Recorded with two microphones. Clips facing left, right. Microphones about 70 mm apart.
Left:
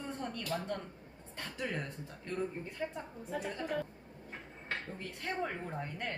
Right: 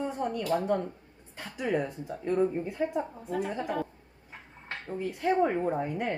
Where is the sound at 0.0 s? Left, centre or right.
Centre.